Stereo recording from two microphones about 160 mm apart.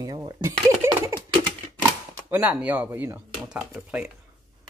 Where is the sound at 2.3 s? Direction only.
10° right (ahead or behind).